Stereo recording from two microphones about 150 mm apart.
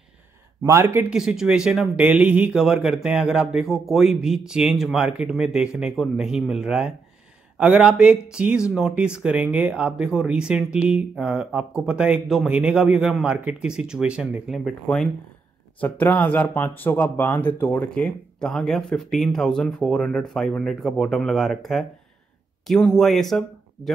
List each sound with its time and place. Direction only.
0.7 s speech: 15° right (ahead or behind)
1.1 s speech: 5° right (ahead or behind)
14.6 s speech: 5° left (ahead or behind)